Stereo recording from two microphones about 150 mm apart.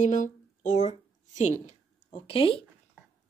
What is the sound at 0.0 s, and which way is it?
Speech, 55° left (ahead or behind).